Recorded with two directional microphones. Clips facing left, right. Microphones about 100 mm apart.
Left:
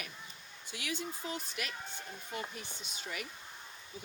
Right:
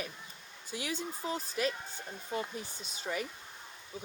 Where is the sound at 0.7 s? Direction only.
35° right (ahead or behind).